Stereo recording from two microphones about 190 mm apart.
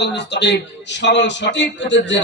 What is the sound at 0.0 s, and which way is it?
Speech, 65° left (ahead or behind).